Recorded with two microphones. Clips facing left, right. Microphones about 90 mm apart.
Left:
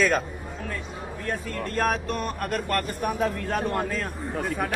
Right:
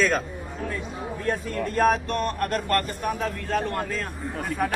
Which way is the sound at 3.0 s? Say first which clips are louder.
Left 2 dB; 15° left (ahead or behind).